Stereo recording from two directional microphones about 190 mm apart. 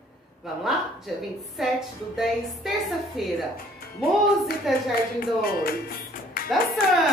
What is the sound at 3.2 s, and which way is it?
Speech, centre (ahead or behind).